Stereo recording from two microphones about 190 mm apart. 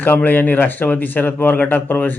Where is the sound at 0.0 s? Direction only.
10° left (ahead or behind).